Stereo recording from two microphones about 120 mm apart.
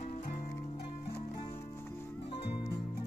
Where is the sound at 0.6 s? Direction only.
60° left (ahead or behind).